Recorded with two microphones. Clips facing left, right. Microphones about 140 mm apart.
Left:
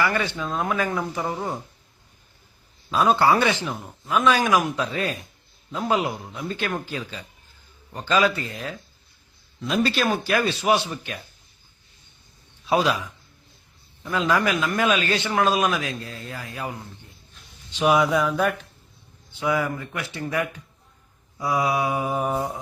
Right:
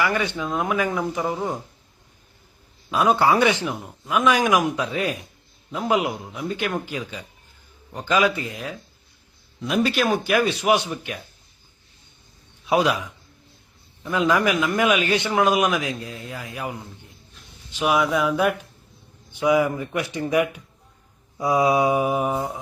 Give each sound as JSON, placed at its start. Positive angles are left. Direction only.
{"t": 0.0, "sound": "speech", "side_deg": -10}
{"t": 3.1, "sound": "speech", "side_deg": -10}
{"t": 14.0, "sound": "speech", "side_deg": -15}
{"t": 21.3, "sound": "mantra", "side_deg": -20}